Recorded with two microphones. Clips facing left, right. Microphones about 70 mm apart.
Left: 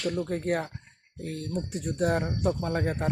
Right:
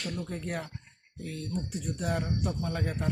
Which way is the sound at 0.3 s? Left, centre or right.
Left.